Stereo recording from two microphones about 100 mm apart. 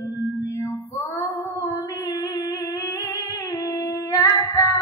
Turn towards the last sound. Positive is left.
turn(degrees=35)  # may be behind; listen again after turning